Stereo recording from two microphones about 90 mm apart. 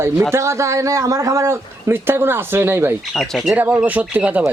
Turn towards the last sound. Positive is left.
turn(degrees=-15)  # may be behind; listen again after turning